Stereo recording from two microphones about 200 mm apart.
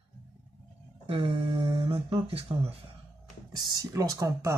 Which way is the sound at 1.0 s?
25° right (ahead or behind).